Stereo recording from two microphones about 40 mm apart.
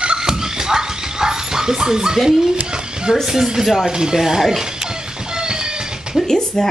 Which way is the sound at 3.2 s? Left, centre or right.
Centre.